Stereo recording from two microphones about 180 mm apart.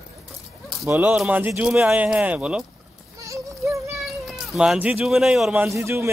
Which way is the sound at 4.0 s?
Centre (ahead or behind).